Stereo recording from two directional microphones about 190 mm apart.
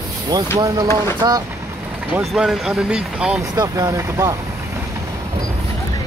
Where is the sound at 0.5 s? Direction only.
15° right (ahead or behind).